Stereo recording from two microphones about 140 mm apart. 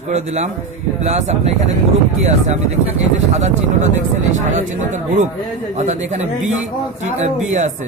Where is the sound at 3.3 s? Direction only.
60° right (ahead or behind).